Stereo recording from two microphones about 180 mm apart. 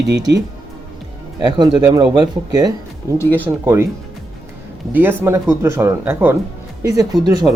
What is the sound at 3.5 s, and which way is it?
Speech, 15° right (ahead or behind).